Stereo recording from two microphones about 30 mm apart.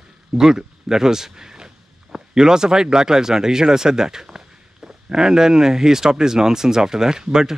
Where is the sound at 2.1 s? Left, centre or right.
Right.